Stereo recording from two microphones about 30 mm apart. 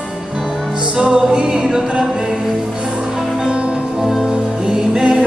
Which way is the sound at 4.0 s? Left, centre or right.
Centre.